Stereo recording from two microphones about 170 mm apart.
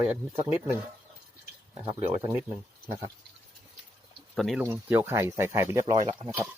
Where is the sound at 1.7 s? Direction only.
25° right (ahead or behind).